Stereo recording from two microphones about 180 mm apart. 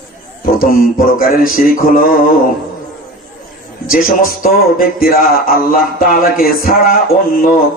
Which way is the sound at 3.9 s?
55° left (ahead or behind).